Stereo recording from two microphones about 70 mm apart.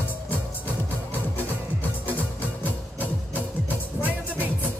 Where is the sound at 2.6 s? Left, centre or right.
Right.